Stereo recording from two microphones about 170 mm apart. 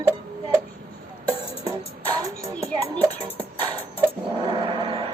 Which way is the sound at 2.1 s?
20° right (ahead or behind).